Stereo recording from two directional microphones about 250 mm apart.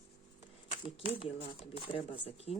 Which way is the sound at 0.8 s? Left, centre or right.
Left.